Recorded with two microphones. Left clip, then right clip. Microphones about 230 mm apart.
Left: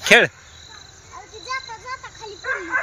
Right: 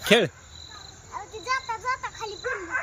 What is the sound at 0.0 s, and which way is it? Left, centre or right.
Speech, centre.